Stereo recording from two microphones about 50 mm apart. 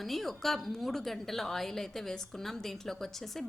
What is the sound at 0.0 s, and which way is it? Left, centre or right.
A woman's voice, centre.